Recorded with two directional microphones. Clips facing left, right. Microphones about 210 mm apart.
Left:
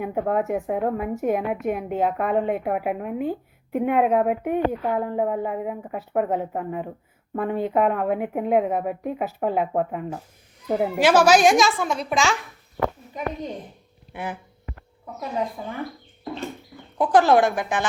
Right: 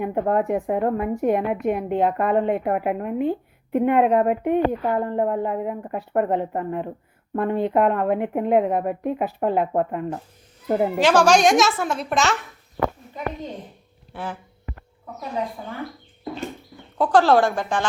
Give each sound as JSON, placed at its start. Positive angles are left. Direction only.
{"t": 0.0, "sound": "a woman's voice", "side_deg": 0}
{"t": 14.1, "sound": "a sound", "side_deg": 15}
{"t": 17.0, "sound": "a woman's voice", "side_deg": 15}